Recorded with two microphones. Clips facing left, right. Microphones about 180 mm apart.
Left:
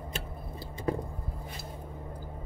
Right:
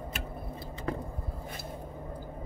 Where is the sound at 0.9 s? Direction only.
20° left (ahead or behind).